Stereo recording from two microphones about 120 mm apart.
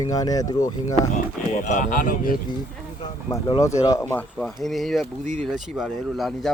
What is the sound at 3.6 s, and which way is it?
Speech, 25° left (ahead or behind).